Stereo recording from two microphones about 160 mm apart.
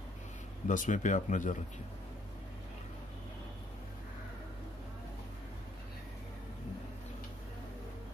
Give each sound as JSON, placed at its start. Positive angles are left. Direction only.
{"t": 0.7, "sound": "speech", "side_deg": 55}